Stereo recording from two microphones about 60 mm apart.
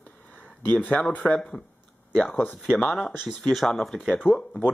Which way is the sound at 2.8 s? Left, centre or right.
Centre.